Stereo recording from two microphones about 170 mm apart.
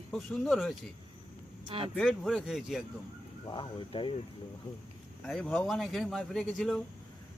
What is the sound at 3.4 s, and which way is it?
Speech, 25° left (ahead or behind).